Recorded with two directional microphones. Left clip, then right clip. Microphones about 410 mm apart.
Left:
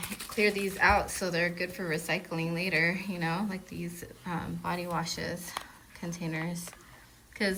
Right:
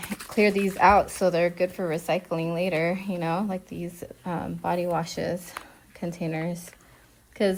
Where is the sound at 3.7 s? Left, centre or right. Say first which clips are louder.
Right 5 dB; right.